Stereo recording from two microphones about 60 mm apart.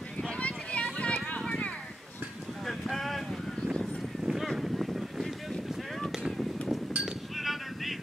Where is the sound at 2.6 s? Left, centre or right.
Centre.